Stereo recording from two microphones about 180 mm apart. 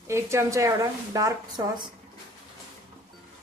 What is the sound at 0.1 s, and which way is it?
A woman's voice, 15° right (ahead or behind).